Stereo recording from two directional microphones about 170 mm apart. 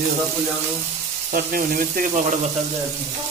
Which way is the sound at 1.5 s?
55° right (ahead or behind).